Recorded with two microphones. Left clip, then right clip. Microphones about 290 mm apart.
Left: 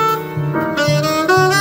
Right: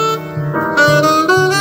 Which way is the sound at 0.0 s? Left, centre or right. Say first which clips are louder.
Even; centre.